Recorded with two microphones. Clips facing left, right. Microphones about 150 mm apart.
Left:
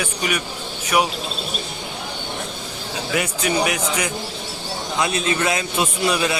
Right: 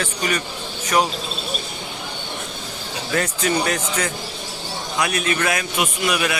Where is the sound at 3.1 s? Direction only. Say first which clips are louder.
Right 1 dB; 10° left (ahead or behind).